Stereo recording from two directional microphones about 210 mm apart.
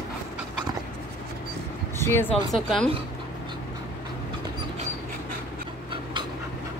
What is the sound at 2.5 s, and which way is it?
Speech, centre (ahead or behind).